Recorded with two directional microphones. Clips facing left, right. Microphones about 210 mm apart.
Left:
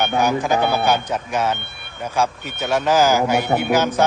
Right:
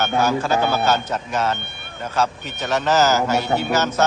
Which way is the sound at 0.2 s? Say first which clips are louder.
Left 1 dB; 15° left (ahead or behind).